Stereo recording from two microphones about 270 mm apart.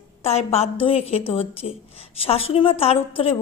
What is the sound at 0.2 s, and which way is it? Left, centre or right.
A woman's voice, left.